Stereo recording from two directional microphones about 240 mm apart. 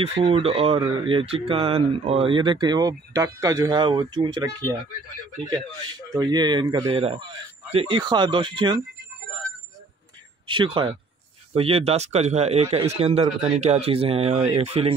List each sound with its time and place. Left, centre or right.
0.0 s speech: right
10.4 s speech: right